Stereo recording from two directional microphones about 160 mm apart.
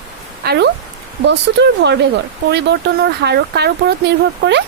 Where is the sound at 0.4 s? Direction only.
90° right.